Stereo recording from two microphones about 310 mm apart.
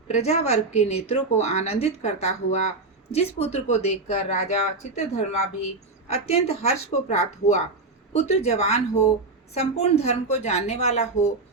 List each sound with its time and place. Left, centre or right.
0.1 s speech: left